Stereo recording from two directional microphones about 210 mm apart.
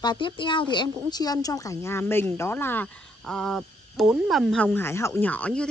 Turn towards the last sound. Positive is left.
turn(degrees=5)  # may be behind; listen again after turning